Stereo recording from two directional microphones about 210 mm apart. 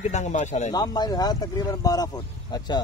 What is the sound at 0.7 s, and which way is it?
Speech, 20° left (ahead or behind).